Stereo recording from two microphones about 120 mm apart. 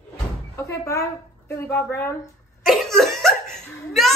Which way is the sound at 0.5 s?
25° left (ahead or behind).